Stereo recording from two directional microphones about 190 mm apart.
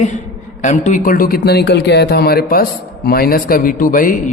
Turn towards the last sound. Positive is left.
turn(degrees=45)  # may be behind; listen again after turning